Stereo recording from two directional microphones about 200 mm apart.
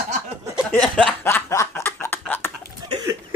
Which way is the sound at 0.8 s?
5° left (ahead or behind).